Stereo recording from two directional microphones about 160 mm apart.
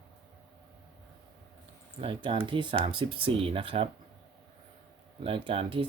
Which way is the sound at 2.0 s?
35° right (ahead or behind).